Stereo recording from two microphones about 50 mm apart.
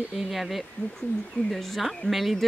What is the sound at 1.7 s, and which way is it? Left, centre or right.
Speech, centre.